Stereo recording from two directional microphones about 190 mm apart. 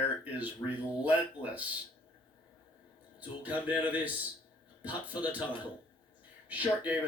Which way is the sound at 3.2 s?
10° right (ahead or behind).